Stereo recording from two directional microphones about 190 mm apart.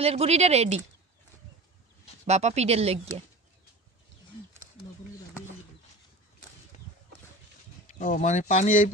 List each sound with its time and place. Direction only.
0.0 s speech: 30° right (ahead or behind)
2.2 s speech: 35° right (ahead or behind)
8.0 s speech: 40° left (ahead or behind)